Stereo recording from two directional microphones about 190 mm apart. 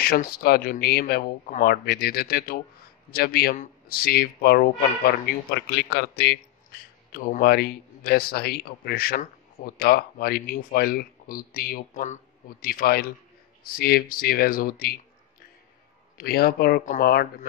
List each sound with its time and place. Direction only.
0.0 s speech: 50° left (ahead or behind)
7.1 s speech: 45° left (ahead or behind)
12.6 s speech: 50° left (ahead or behind)
16.2 s speech: 55° left (ahead or behind)